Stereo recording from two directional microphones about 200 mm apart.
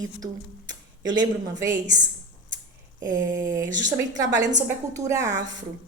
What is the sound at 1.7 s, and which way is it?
Speech, 40° right (ahead or behind).